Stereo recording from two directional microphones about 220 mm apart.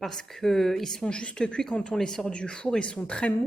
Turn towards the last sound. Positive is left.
turn(degrees=5)  # may be behind; listen again after turning